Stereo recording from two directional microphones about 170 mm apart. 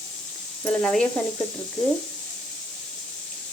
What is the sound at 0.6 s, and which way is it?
Speech, 5° left (ahead or behind).